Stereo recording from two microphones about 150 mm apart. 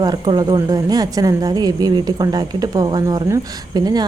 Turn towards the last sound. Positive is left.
turn(degrees=-25)  # may be behind; listen again after turning